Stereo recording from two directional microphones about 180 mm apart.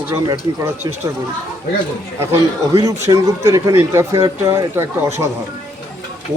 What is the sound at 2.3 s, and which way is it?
A man's voice, 20° right (ahead or behind).